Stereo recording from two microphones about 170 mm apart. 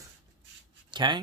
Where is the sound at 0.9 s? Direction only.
25° right (ahead or behind).